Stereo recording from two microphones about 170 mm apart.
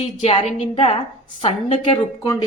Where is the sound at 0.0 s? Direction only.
35° left (ahead or behind).